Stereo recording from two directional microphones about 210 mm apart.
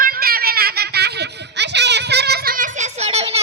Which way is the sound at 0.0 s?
45° right (ahead or behind).